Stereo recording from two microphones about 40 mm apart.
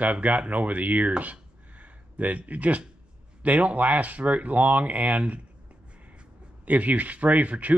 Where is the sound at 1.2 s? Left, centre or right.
Right.